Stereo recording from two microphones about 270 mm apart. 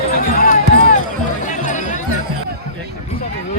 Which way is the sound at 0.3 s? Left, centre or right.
Left.